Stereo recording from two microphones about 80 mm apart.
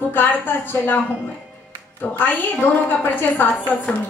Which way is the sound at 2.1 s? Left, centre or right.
Left.